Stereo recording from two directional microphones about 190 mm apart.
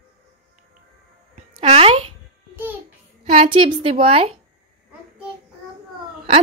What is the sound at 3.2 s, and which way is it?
Speech, 45° right (ahead or behind).